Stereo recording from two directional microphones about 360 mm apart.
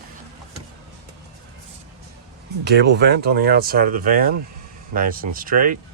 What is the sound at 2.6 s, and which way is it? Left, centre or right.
Speech, right.